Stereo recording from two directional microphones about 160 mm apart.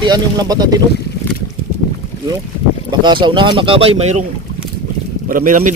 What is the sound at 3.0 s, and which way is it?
Speech, 30° right (ahead or behind).